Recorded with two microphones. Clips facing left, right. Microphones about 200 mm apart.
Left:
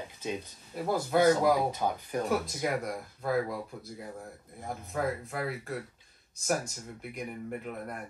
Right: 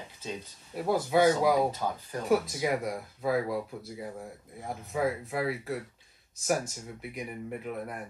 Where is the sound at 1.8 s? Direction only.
15° left (ahead or behind).